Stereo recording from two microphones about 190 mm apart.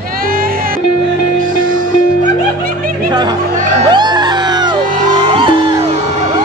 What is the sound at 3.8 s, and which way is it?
Music, 20° right (ahead or behind).